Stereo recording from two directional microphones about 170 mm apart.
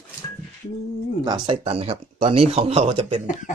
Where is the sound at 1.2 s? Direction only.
25° right (ahead or behind).